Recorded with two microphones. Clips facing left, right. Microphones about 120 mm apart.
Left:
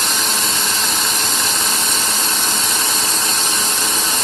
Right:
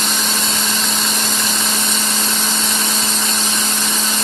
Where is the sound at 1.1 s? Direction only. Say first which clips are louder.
Even; 10° left (ahead or behind).